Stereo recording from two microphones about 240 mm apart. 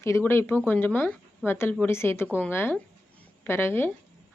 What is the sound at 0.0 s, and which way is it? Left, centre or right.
A woman's voice, centre.